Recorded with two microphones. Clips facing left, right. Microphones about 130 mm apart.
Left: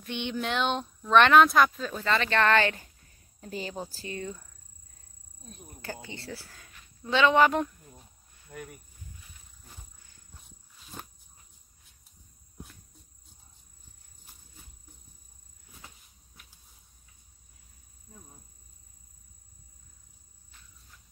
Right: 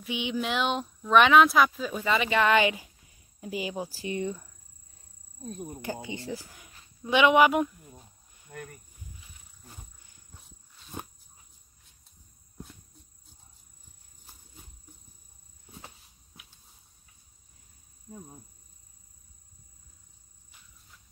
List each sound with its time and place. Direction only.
0.0 s speech: 5° right (ahead or behind)
5.4 s speech: 30° right (ahead or behind)
6.0 s speech: 15° right (ahead or behind)
7.0 s a sound: 15° right (ahead or behind); by 8.8 s 5° left (ahead or behind)